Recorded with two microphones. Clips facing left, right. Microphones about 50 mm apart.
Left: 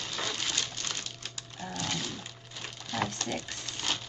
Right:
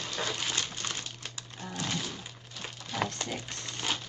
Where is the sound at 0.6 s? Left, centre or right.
Right.